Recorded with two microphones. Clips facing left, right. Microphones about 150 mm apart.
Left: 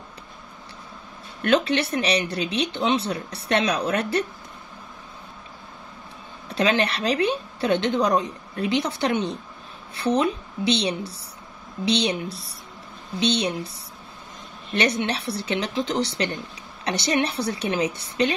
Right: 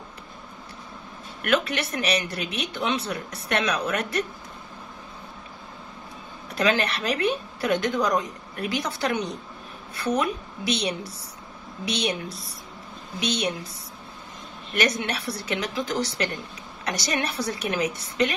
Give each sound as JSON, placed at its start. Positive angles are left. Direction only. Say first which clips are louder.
{"t": 1.4, "sound": "speech", "louder": "left 4 dB", "side_deg": 30}
{"t": 6.5, "sound": "speech", "louder": "left 2 dB", "side_deg": 30}
{"t": 13.2, "sound": "speech", "louder": "left 4 dB", "side_deg": 30}
{"t": 14.7, "sound": "speech", "louder": "left 2 dB", "side_deg": 30}